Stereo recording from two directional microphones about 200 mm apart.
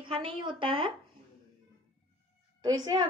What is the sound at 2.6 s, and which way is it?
Speech, 20° right (ahead or behind).